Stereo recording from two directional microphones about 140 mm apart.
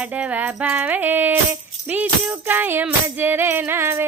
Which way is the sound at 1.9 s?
10° right (ahead or behind).